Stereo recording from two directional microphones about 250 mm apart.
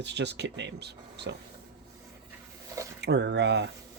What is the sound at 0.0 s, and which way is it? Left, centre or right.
Speech, right.